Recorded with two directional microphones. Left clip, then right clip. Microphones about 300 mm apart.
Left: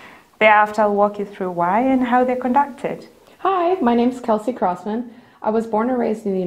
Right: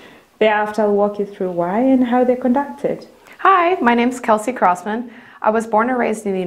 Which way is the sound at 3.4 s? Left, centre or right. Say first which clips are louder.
Right 5 dB; right.